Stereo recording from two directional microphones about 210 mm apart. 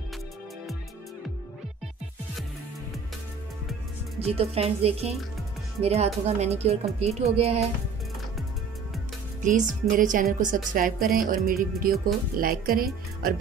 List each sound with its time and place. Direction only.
4.2 s speech: 30° right (ahead or behind)
9.4 s speech: 35° right (ahead or behind)
11.1 s music: 40° right (ahead or behind)
12.4 s speech: 45° right (ahead or behind)